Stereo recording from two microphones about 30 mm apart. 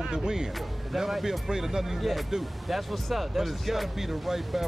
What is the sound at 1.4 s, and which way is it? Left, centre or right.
Speech, centre.